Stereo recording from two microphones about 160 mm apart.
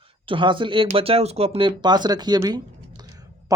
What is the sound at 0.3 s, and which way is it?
Speech, 30° right (ahead or behind).